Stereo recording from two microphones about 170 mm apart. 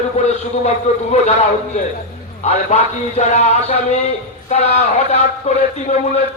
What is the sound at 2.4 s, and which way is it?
A man's voice, 40° left (ahead or behind).